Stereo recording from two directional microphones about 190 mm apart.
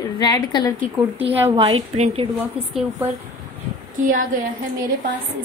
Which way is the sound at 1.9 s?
35° right (ahead or behind).